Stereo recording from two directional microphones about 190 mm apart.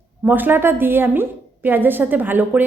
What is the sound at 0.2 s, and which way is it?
Speech, 10° right (ahead or behind).